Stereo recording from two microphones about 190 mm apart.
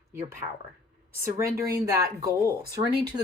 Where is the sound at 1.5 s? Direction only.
15° right (ahead or behind).